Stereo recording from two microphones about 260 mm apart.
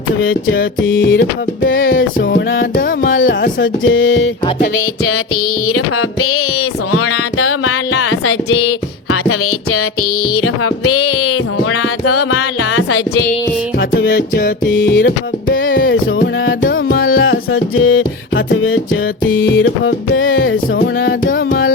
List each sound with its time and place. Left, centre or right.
0.2 s music: left
0.8 s music: left
5.6 s music: left
9.7 s music: left
13.9 s music: left
17.0 s music: left